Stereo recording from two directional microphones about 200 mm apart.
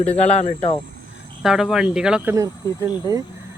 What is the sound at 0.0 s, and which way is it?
Speech, 30° left (ahead or behind).